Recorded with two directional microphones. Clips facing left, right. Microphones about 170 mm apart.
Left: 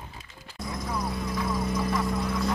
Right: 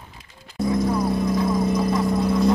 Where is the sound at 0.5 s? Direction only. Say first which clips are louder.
Right 12 dB; 30° right (ahead or behind).